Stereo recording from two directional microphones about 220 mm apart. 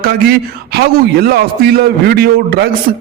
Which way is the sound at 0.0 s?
45° right (ahead or behind).